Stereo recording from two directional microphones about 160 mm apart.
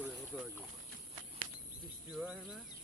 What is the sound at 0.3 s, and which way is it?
Boat, 10° left (ahead or behind).